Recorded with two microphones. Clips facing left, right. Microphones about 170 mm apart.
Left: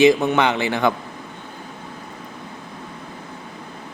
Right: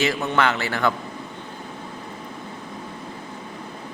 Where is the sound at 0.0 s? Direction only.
15° left (ahead or behind).